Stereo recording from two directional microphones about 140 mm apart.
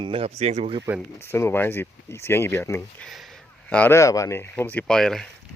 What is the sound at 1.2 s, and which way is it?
Speech, 20° left (ahead or behind).